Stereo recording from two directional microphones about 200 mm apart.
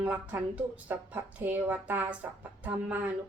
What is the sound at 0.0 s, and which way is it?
Speech, 5° right (ahead or behind).